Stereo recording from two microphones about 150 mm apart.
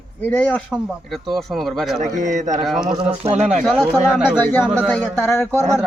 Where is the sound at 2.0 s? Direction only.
55° right (ahead or behind).